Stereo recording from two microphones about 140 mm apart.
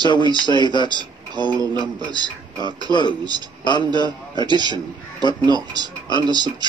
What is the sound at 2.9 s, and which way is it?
A man's voice, 30° left (ahead or behind).